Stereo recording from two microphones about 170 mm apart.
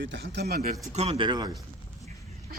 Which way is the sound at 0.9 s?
40° right (ahead or behind).